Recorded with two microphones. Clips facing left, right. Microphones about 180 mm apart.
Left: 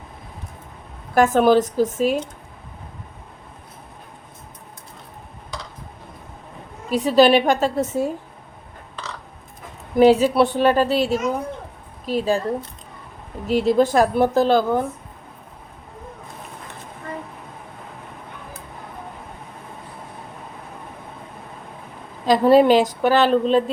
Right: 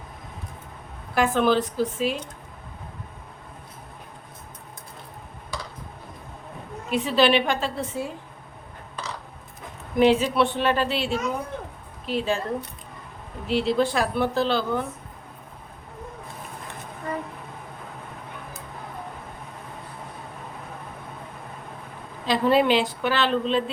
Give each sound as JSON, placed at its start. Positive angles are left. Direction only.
{"t": 1.1, "sound": "a woman's voice", "side_deg": 45}
{"t": 6.9, "sound": "a woman's voice", "side_deg": 40}
{"t": 9.9, "sound": "a woman's voice", "side_deg": 40}
{"t": 13.5, "sound": "a woman's voice", "side_deg": 45}
{"t": 22.3, "sound": "a woman's voice", "side_deg": 40}